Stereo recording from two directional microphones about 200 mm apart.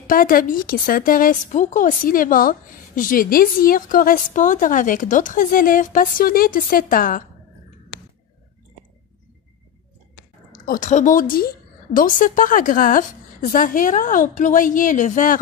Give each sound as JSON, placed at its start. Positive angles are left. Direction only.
{"t": 0.0, "sound": "a woman's voice", "side_deg": 45}
{"t": 10.6, "sound": "a woman's voice", "side_deg": 40}